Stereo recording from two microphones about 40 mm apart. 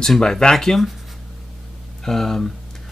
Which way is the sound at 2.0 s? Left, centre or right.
Centre.